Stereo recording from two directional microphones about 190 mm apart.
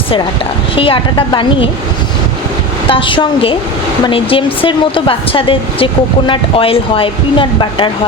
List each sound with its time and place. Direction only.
0.8 s speech: 25° left (ahead or behind)
2.9 s speech: 25° left (ahead or behind)